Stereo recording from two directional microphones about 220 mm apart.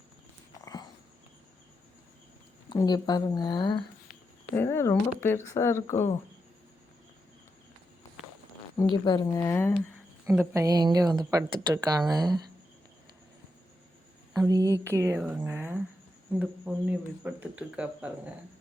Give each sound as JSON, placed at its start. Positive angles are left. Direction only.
{"t": 0.6, "sound": "walk", "side_deg": 20}
{"t": 2.6, "sound": "speech", "side_deg": 20}
{"t": 8.7, "sound": "speech", "side_deg": 20}
{"t": 10.2, "sound": "speech", "side_deg": -10}
{"t": 14.4, "sound": "a woman's voice", "side_deg": -15}